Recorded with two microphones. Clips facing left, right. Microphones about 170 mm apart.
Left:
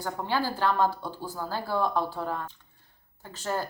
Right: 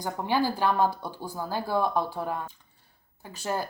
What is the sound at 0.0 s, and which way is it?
Speech, 15° right (ahead or behind).